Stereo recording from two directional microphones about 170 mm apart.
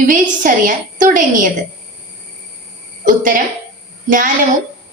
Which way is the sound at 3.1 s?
55° right (ahead or behind).